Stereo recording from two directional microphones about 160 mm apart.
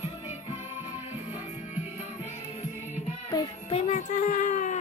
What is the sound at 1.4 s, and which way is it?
Music, 50° left (ahead or behind).